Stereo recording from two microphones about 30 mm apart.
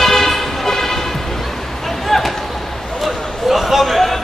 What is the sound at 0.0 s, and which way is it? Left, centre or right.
Vehicle, centre.